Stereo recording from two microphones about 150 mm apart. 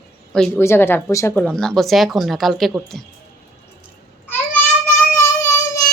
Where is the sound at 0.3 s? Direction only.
5° left (ahead or behind).